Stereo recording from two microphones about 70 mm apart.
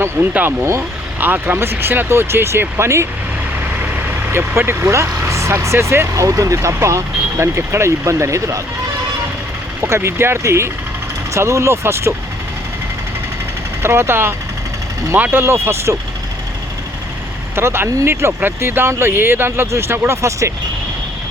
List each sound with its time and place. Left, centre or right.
0.2 s speech: right
1.2 s speech: right
6.2 s speech: right
9.8 s speech: right
13.8 s speech: right
17.5 s speech: right